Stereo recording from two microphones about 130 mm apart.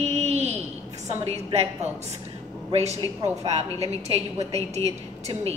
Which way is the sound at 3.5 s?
55° right (ahead or behind).